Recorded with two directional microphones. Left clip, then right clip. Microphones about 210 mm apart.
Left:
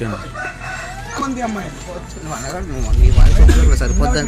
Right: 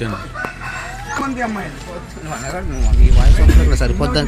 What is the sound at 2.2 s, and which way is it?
Speech, 20° right (ahead or behind).